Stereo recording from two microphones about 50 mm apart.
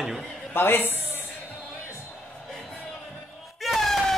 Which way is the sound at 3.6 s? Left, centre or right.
Centre.